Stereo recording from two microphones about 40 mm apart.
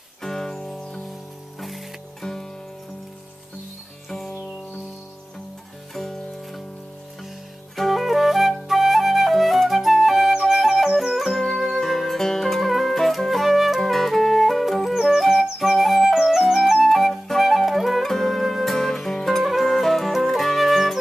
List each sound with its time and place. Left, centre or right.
0.2 s music: centre
2.2 s music: centre
5.9 s music: centre
7.7 s flute: centre
11.5 s music: centre
16.8 s flute: centre
18.4 s music: centre